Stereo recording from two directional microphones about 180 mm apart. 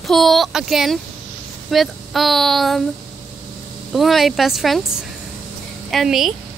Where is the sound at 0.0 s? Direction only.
Centre (ahead or behind).